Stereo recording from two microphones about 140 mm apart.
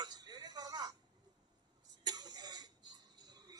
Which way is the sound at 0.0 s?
30° right (ahead or behind).